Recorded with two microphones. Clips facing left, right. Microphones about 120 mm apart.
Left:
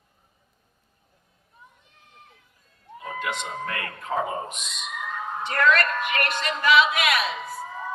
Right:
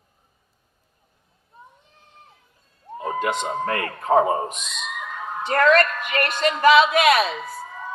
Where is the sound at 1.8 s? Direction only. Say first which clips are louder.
Right 2 dB; 30° right (ahead or behind).